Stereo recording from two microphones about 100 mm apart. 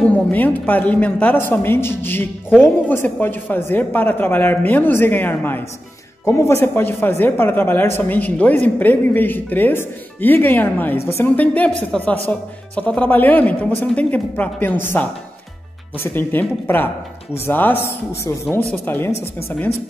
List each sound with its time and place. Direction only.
0.0 s speech: 15° left (ahead or behind)
11.3 s speech: 15° left (ahead or behind)